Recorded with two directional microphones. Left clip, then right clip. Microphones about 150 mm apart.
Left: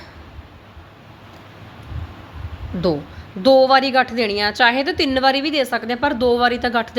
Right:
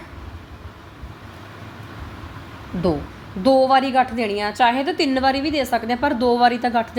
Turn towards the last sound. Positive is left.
turn(degrees=10)  # may be behind; listen again after turning